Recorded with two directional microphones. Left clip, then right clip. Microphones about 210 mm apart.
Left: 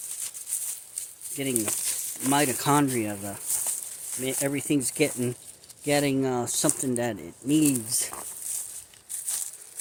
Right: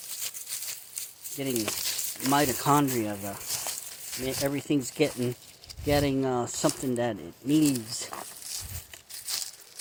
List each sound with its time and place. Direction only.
1.5 s frying: 45° right (ahead or behind)
2.3 s speech: 10° left (ahead or behind)
3.4 s a sound: 45° right (ahead or behind)
4.2 s speech: 15° left (ahead or behind)
8.1 s a sound: 50° right (ahead or behind)
9.2 s crumpling: 50° right (ahead or behind)